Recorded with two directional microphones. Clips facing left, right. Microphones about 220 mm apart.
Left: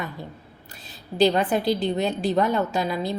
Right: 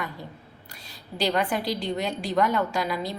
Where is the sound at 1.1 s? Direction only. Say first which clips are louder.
Left 6 dB; 35° left (ahead or behind).